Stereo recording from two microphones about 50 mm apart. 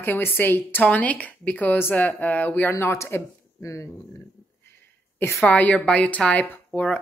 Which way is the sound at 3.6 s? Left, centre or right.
Left.